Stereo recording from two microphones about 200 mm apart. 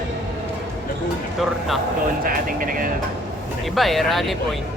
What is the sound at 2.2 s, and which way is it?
Vehicle, 45° right (ahead or behind).